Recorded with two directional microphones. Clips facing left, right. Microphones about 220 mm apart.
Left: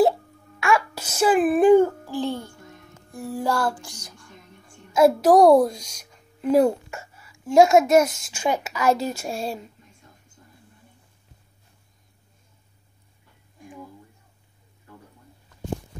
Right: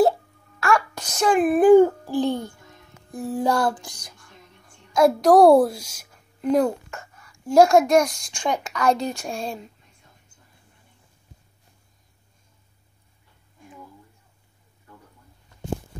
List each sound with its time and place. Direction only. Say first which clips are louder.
0.6 s a sound: even; centre (ahead or behind)
1.8 s music: right 4 dB; 15° right (ahead or behind)
4.9 s a child's voice: even; 5° left (ahead or behind)
5.4 s a child's voice: right 2 dB; 5° right (ahead or behind)
6.4 s a child's voice: left 2 dB; 10° left (ahead or behind)